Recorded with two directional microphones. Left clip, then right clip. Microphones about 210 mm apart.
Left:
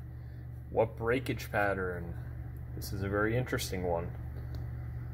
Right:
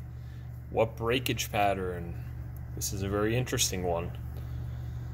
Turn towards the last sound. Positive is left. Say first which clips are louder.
# right 4 dB
turn(degrees=-10)  # may be behind; listen again after turning